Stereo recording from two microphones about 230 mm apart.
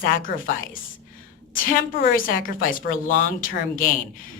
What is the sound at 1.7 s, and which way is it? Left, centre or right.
A woman's voice, left.